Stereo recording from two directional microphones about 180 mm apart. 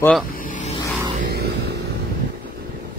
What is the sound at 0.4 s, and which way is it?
Vehicle, 45° left (ahead or behind).